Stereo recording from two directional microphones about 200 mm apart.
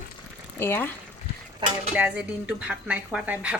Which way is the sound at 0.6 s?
10° left (ahead or behind).